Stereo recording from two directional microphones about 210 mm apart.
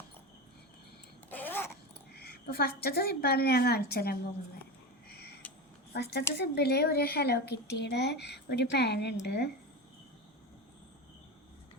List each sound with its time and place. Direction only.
1.3 s babbling: 10° left (ahead or behind)
2.1 s speech: 50° left (ahead or behind)
5.0 s a sound: 50° left (ahead or behind)
5.9 s speech: 50° left (ahead or behind)